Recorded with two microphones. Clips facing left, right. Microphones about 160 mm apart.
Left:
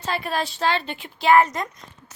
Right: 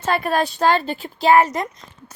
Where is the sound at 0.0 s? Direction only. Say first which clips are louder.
Right 6 dB; 50° right (ahead or behind).